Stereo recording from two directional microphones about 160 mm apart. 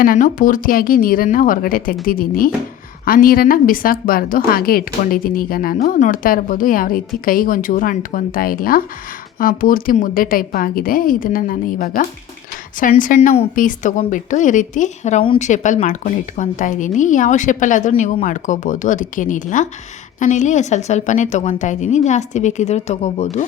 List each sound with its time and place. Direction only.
0.0 s a woman's voice: 60° left (ahead or behind)
13.1 s a woman's voice: 40° left (ahead or behind)
13.6 s a woman's voice: 50° left (ahead or behind)